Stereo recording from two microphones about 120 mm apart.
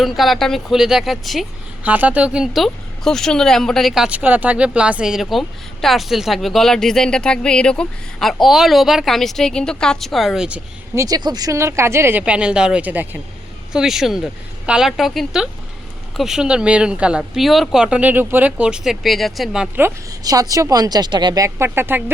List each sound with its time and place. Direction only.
0.0 s speech: centre (ahead or behind)
1.8 s speech: 10° right (ahead or behind)
10.9 s speech: 30° right (ahead or behind); by 13.1 s 15° right (ahead or behind)
13.7 s speech: 5° right (ahead or behind)
20.1 s speech: 30° right (ahead or behind)